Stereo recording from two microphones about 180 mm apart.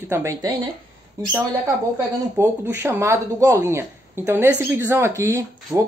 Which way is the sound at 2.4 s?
15° right (ahead or behind).